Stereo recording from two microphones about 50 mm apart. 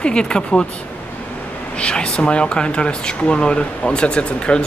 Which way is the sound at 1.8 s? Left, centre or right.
Left.